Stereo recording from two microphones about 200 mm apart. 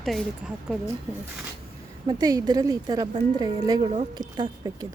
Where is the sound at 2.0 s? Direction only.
20° right (ahead or behind).